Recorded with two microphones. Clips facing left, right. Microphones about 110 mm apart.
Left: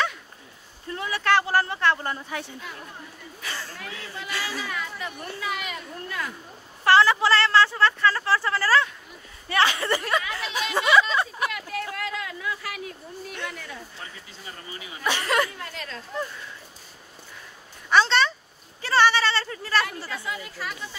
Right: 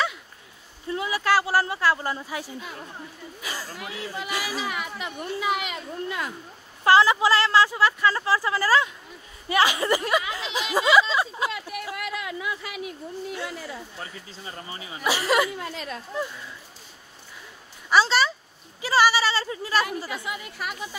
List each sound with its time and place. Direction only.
0.8 s speech: 15° right (ahead or behind)
3.4 s chatter: 10° right (ahead or behind)
6.8 s speech: 15° right (ahead or behind)
15.0 s speech: 10° right (ahead or behind)
17.8 s a sound: 5° right (ahead or behind)
18.8 s speech: 10° right (ahead or behind)